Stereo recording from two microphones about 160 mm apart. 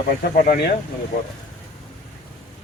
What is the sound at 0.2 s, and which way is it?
Speech, 60° left (ahead or behind).